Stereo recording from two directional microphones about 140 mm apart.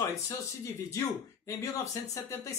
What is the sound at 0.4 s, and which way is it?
Speech, 20° left (ahead or behind).